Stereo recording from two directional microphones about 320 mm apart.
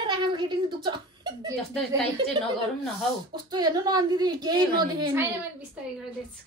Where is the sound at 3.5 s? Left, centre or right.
Centre.